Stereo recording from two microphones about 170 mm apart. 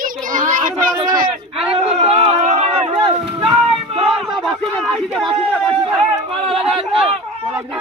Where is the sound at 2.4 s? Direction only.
40° right (ahead or behind).